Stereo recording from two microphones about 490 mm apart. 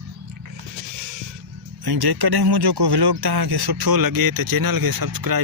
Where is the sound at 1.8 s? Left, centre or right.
Right.